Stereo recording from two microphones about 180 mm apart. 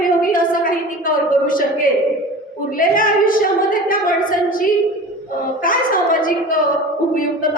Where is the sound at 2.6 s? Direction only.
50° left (ahead or behind).